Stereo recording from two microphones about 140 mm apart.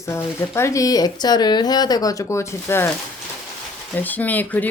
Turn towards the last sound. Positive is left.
turn(degrees=10)  # may be behind; listen again after turning